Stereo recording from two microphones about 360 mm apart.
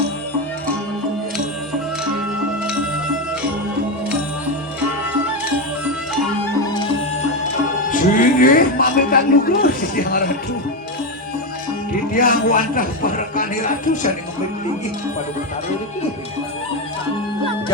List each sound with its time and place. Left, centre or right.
7.9 s speech: left
12.1 s a man's voice: left